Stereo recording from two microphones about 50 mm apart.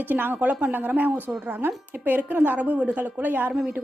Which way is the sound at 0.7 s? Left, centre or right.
Right.